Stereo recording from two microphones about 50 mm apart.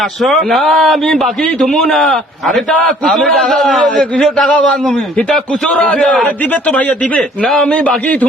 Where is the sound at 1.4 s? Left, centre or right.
Centre.